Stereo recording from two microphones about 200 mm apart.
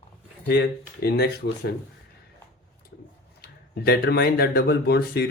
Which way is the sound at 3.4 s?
50° left (ahead or behind).